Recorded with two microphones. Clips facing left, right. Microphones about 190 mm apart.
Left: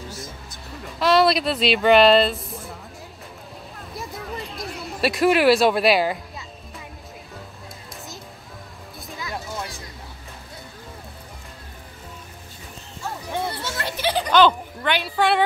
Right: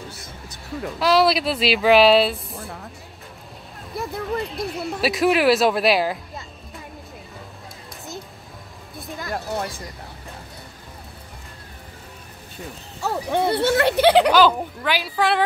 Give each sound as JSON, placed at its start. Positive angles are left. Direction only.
{"t": 0.9, "sound": "speech", "side_deg": 0}
{"t": 4.1, "sound": "speech", "side_deg": 0}
{"t": 9.2, "sound": "a sound", "side_deg": -55}
{"t": 13.0, "sound": "speech", "side_deg": -65}
{"t": 14.3, "sound": "speech", "side_deg": -5}